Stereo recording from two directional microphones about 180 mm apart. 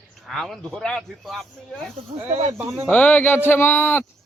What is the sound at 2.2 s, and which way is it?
Speech, 35° right (ahead or behind).